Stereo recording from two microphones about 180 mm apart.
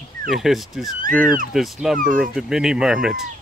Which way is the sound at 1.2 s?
50° right (ahead or behind).